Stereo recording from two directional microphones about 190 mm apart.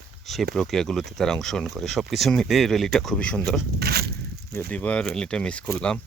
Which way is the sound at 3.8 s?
55° right (ahead or behind).